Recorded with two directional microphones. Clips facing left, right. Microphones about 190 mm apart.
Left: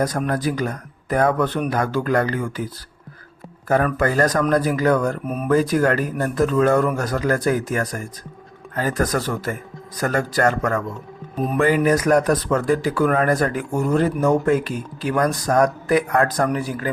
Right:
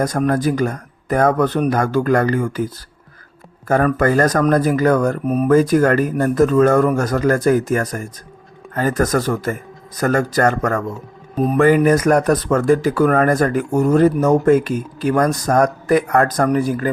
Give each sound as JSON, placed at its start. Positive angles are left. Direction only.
{"t": 0.0, "sound": "speech", "side_deg": -45}
{"t": 3.7, "sound": "speech", "side_deg": -45}